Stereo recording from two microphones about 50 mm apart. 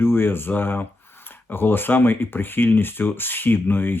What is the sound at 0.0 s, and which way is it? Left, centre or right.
Speech, left.